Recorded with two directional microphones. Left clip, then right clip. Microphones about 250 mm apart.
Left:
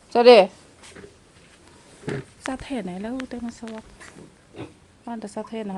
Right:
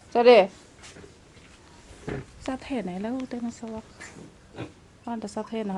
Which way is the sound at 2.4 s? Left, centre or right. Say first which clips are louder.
Left 1 dB; centre.